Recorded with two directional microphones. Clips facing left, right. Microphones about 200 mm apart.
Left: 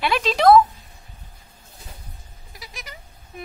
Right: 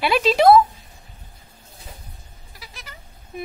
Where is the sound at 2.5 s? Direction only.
15° left (ahead or behind).